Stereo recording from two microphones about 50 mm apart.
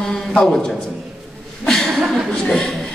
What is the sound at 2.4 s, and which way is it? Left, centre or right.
Chuckle, centre.